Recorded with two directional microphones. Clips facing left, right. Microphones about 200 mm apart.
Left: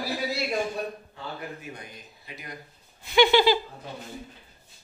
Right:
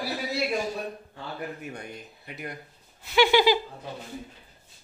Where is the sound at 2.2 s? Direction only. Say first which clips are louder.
Right 5 dB; 60° right (ahead or behind).